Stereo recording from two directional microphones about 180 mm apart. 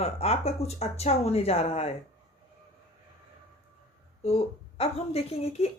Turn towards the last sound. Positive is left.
turn(degrees=35)  # may be behind; listen again after turning